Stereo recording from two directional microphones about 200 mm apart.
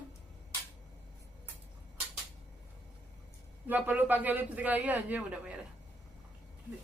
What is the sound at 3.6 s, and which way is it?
A man's voice, 10° right (ahead or behind).